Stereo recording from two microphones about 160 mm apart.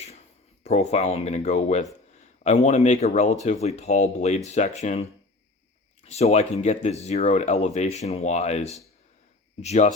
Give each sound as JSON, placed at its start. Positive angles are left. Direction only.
{"t": 0.6, "sound": "speech", "side_deg": 45}
{"t": 6.1, "sound": "speech", "side_deg": 45}